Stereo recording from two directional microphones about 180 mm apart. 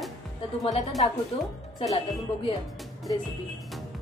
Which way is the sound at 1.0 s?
30° left (ahead or behind).